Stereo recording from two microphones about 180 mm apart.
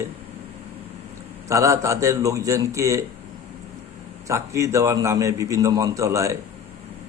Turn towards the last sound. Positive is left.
turn(degrees=-15)  # may be behind; listen again after turning